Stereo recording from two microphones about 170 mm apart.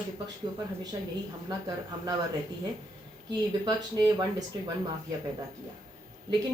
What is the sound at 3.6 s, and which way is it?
Speech, 25° right (ahead or behind).